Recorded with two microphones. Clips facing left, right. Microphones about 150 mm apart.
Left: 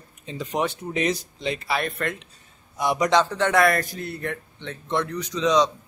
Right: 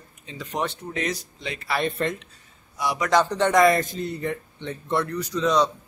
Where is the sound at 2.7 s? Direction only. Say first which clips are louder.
Left 4 dB; 20° left (ahead or behind).